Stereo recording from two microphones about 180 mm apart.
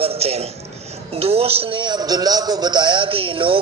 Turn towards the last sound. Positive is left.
turn(degrees=-30)  # may be behind; listen again after turning